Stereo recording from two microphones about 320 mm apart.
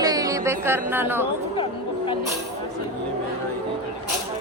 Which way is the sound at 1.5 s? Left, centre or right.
Centre.